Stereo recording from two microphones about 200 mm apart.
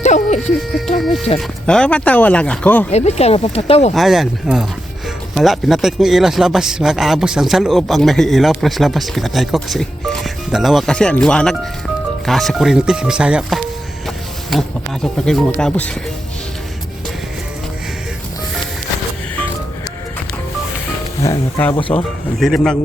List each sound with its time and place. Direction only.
0.0 s a sound: 35° left (ahead or behind)
0.7 s speech: centre (ahead or behind)
2.9 s speech: 35° left (ahead or behind)
3.9 s speech: centre (ahead or behind)
21.2 s speech: 15° left (ahead or behind)
21.8 s speech: 25° left (ahead or behind)
22.4 s speech: centre (ahead or behind)